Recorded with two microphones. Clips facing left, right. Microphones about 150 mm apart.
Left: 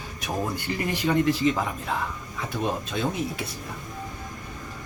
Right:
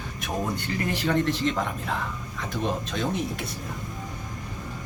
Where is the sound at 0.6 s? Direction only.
10° left (ahead or behind).